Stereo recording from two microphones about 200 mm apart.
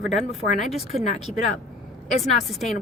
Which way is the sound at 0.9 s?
35° left (ahead or behind).